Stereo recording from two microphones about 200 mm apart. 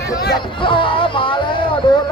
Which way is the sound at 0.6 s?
25° left (ahead or behind).